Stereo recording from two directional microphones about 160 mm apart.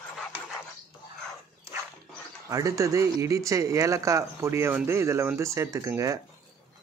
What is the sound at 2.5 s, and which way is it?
Speech, 20° right (ahead or behind).